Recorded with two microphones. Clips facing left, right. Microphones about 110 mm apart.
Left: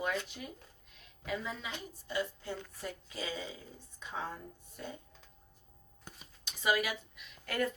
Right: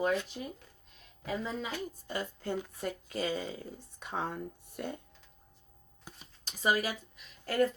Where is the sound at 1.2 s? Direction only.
35° right (ahead or behind).